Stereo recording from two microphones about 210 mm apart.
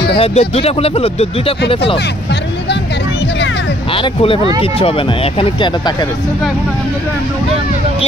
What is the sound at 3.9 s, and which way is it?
Speech, 25° left (ahead or behind).